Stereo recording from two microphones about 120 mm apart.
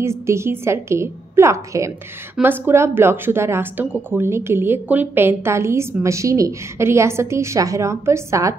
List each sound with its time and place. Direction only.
0.0 s a woman's voice: 20° right (ahead or behind)